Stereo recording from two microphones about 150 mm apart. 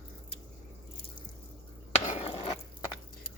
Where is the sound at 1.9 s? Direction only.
45° left (ahead or behind).